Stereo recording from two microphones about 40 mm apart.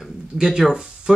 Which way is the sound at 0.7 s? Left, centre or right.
Centre.